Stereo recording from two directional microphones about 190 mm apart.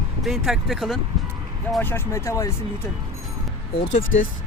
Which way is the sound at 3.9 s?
40° left (ahead or behind).